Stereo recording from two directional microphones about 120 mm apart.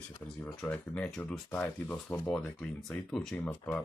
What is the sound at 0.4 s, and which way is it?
Speech, 10° left (ahead or behind).